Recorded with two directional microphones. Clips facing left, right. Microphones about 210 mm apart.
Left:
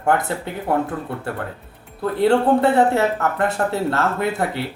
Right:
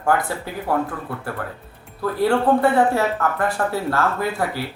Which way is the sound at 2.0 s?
25° left (ahead or behind).